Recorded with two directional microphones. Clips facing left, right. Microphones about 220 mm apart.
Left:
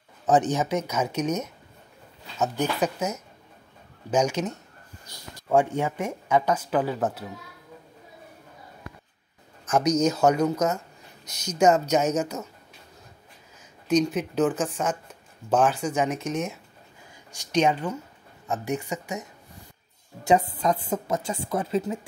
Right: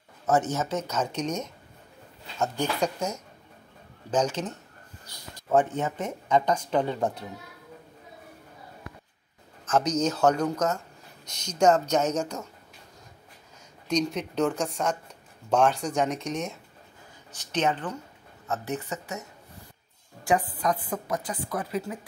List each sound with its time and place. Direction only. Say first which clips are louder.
0.3 s speech: left 3 dB; 15° left (ahead or behind)
2.6 s speech: left 2 dB; 5° left (ahead or behind)
9.7 s speech: left 3 dB; 10° left (ahead or behind)
13.8 s a woman's voice: left 4 dB; 5° left (ahead or behind)
17.3 s speech: left 4 dB; 15° left (ahead or behind)
20.2 s a woman's voice: left 4 dB; 25° left (ahead or behind)